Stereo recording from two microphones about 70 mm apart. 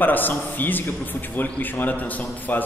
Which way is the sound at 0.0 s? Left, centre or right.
Left.